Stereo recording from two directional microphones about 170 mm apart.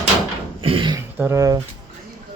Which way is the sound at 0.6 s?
30° right (ahead or behind).